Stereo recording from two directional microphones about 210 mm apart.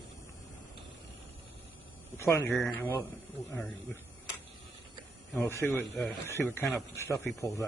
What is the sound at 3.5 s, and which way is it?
Speech, centre (ahead or behind).